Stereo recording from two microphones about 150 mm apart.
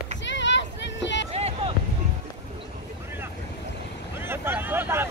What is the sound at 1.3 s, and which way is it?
Vehicle, 45° right (ahead or behind).